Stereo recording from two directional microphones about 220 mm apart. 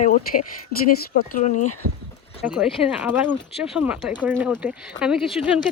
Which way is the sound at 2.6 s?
5° right (ahead or behind).